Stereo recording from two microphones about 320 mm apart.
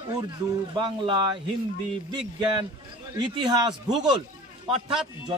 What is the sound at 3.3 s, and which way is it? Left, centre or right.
Speech, centre.